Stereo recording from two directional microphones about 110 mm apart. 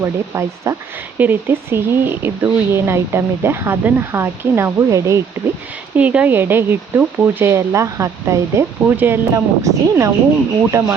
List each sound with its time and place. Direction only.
0.0 s speech: 30° right (ahead or behind)
6.0 s speech: 15° right (ahead or behind)